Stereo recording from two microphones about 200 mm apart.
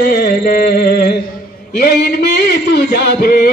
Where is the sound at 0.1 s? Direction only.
50° left (ahead or behind).